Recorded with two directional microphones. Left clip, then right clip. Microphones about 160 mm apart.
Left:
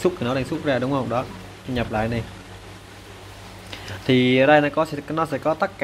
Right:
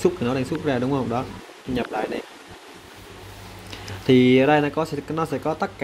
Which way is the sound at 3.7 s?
35° right (ahead or behind).